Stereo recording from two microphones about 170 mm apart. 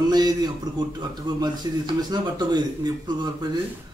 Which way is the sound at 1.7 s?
20° right (ahead or behind).